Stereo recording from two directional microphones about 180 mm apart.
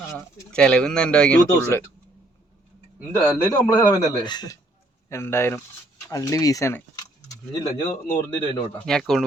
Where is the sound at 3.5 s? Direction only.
20° left (ahead or behind).